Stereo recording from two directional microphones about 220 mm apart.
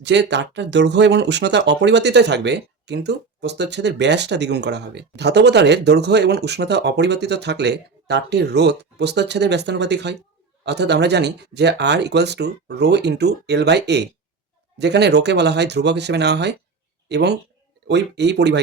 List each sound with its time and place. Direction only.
0.0 s speech: 50° right (ahead or behind)